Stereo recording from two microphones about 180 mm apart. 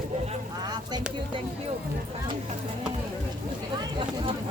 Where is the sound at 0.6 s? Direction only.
25° right (ahead or behind).